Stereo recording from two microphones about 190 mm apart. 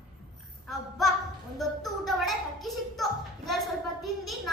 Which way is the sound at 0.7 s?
Centre (ahead or behind).